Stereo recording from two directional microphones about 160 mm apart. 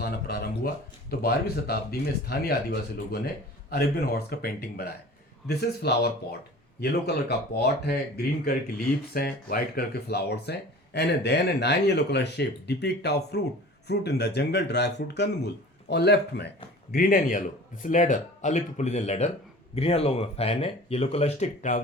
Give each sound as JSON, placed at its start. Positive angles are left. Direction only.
{"t": 0.0, "sound": "a sound", "side_deg": 85}
{"t": 1.1, "sound": "speech", "side_deg": 75}
{"t": 5.5, "sound": "speech", "side_deg": 90}
{"t": 16.9, "sound": "speech", "side_deg": 65}